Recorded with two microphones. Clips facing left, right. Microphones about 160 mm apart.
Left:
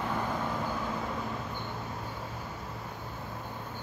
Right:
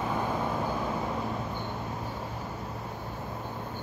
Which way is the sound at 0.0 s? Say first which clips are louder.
Right 2 dB; 15° right (ahead or behind).